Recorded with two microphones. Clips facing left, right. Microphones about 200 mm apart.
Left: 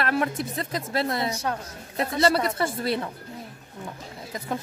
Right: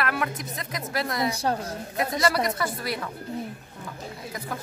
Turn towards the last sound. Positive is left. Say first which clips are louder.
# left 4 dB
turn(degrees=25)  # may be behind; listen again after turning